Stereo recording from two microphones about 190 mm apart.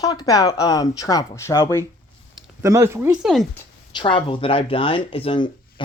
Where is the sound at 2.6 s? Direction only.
15° right (ahead or behind).